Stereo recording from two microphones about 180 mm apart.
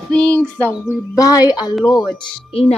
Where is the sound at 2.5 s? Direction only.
30° left (ahead or behind).